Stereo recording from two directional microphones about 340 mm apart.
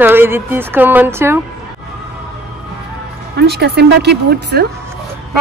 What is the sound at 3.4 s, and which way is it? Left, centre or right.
Speech, right.